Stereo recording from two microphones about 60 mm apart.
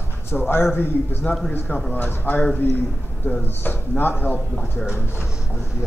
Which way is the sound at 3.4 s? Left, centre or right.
Left.